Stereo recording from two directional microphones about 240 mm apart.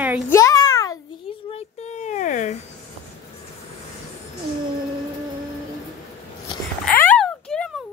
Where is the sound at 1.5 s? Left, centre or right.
Left.